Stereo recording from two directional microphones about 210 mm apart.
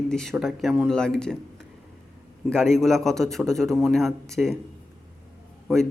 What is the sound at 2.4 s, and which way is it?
A man's voice, 5° left (ahead or behind).